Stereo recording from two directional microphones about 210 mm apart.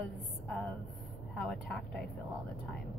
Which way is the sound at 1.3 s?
5° left (ahead or behind).